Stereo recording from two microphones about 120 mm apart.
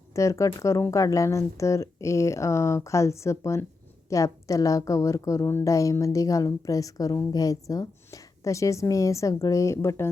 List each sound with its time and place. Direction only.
0.1 s speech: 25° left (ahead or behind)